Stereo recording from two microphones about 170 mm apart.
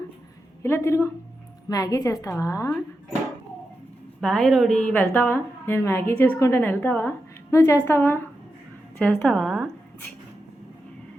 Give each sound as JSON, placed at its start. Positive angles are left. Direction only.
{"t": 0.6, "sound": "a woman's voice", "side_deg": 15}
{"t": 4.2, "sound": "a woman's voice", "side_deg": 5}